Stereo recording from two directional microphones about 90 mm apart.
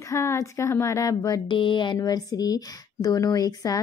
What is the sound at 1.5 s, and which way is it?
Speech, 65° left (ahead or behind).